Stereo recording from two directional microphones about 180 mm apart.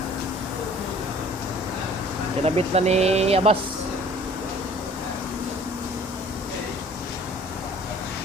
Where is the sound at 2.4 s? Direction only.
35° right (ahead or behind).